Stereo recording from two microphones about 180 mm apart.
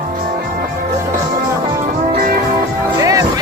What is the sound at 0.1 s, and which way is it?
Music, 50° right (ahead or behind).